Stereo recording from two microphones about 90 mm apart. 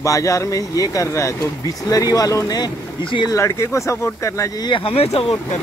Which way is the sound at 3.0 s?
65° left (ahead or behind).